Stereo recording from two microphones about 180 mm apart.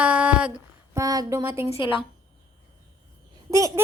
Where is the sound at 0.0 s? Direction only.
5° right (ahead or behind).